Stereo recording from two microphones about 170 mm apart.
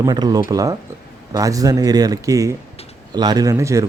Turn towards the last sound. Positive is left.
turn(degrees=-15)  # may be behind; listen again after turning